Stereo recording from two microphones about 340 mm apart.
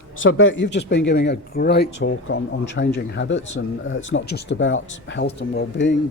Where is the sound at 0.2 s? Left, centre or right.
Left.